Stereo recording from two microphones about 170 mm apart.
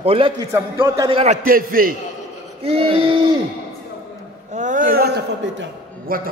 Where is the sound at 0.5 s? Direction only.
15° right (ahead or behind).